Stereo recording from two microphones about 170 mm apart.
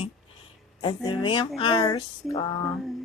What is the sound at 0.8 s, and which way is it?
Speech, 30° left (ahead or behind).